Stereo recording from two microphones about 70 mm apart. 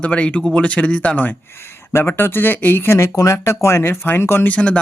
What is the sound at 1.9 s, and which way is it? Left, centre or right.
Speech, left.